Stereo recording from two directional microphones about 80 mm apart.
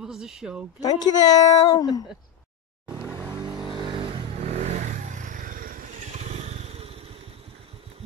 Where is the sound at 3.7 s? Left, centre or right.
Right.